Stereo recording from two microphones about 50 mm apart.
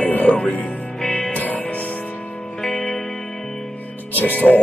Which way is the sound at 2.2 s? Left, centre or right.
Centre.